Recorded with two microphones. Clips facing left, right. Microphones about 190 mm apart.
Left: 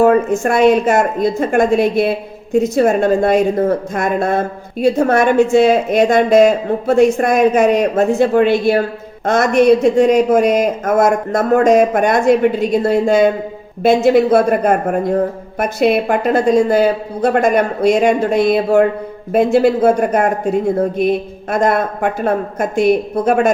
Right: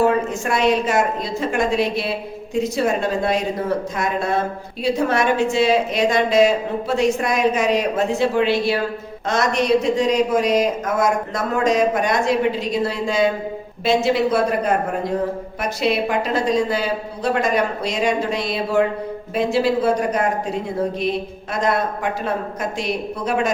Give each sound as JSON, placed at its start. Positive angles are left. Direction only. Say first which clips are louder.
{"t": 0.0, "sound": "a woman's voice", "louder": "left 7 dB", "side_deg": 50}